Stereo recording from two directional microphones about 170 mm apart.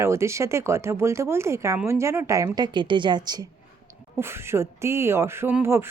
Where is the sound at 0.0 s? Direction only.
15° right (ahead or behind).